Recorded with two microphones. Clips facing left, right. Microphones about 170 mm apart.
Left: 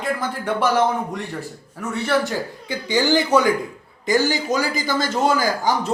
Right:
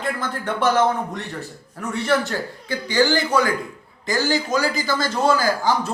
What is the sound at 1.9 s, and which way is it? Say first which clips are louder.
Speech: even; 5° left (ahead or behind).